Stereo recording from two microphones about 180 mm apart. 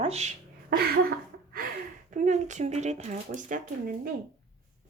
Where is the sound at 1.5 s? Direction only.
50° right (ahead or behind).